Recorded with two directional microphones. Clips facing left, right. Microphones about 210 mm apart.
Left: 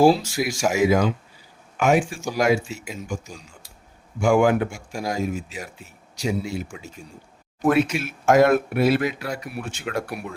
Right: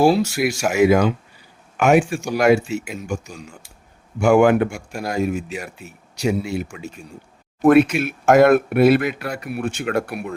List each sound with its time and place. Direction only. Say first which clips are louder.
0.1 s speech: right 3 dB; 65° right (ahead or behind)